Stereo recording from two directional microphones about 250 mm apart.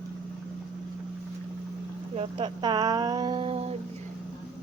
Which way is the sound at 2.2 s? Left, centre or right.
Centre.